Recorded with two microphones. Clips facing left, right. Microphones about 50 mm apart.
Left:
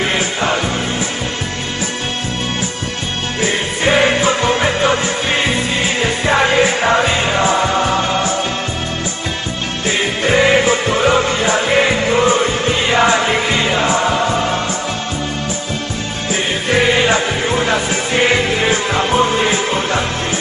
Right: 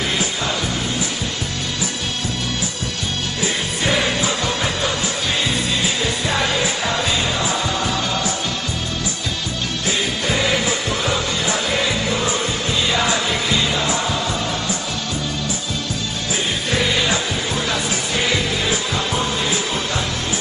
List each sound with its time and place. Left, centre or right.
0.0 s music: left
3.3 s music: left
9.8 s music: left
16.7 s music: left